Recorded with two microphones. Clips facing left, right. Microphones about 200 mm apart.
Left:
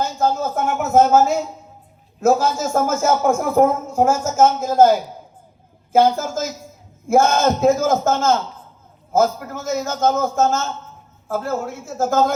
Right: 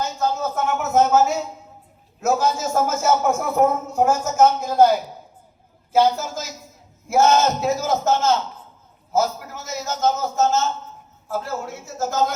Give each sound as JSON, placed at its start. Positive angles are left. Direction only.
{"t": 0.0, "sound": "a man's voice", "side_deg": 50}